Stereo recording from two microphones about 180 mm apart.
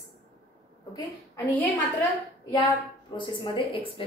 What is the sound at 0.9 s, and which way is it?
Speech, 15° left (ahead or behind).